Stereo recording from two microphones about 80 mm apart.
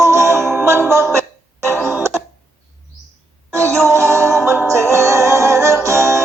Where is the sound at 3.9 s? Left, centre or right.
Right.